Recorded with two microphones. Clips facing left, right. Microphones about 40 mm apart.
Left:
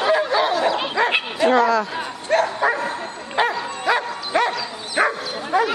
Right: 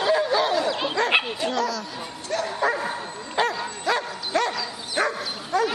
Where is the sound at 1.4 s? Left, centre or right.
Left.